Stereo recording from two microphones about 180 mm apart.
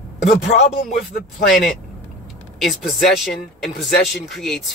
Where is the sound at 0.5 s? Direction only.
40° left (ahead or behind).